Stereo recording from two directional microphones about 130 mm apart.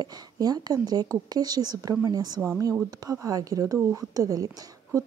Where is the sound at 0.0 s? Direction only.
30° right (ahead or behind).